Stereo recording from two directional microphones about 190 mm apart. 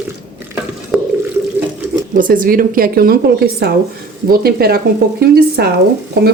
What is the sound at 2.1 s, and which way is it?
A woman's voice, 45° right (ahead or behind).